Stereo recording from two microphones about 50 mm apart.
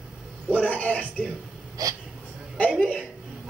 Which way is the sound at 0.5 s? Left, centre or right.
Left.